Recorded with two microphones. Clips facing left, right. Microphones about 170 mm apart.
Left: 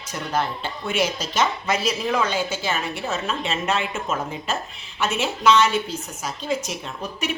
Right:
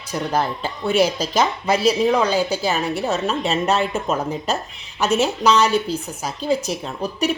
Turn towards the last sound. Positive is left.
turn(degrees=-35)  # may be behind; listen again after turning